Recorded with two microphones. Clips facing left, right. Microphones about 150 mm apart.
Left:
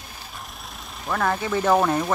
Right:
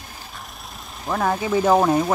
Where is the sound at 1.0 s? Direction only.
15° right (ahead or behind).